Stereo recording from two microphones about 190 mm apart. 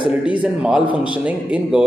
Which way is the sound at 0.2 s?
5° right (ahead or behind).